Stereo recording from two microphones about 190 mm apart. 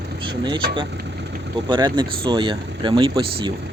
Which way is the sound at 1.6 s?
25° right (ahead or behind).